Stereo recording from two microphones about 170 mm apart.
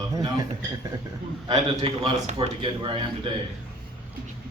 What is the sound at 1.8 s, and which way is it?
A man's voice, 35° right (ahead or behind).